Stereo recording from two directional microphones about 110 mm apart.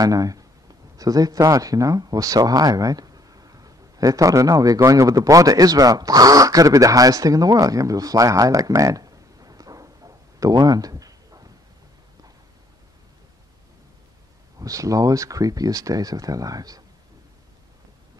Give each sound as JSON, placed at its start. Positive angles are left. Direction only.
{"t": 0.0, "sound": "speech", "side_deg": -35}
{"t": 14.6, "sound": "speech", "side_deg": -30}